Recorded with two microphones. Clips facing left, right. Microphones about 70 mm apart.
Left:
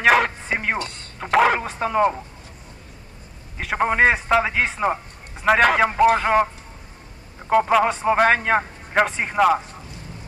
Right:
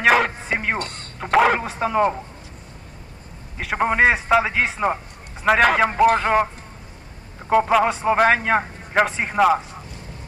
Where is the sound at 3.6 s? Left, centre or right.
Centre.